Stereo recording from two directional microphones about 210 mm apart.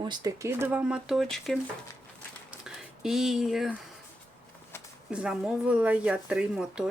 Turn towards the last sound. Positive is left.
turn(degrees=-5)  # may be behind; listen again after turning